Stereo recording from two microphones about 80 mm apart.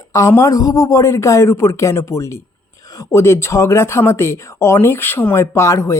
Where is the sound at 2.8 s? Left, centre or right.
Left.